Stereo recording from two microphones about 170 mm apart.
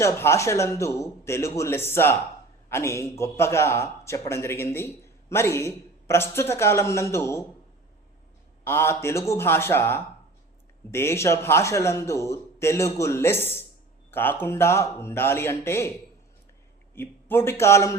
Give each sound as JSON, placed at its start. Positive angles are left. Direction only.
{"t": 0.0, "sound": "a man's voice", "side_deg": 15}
{"t": 8.6, "sound": "a man's voice", "side_deg": 15}
{"t": 16.9, "sound": "a man's voice", "side_deg": 10}